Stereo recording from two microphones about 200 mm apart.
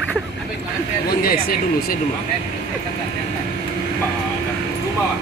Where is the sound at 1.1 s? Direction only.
50° left (ahead or behind).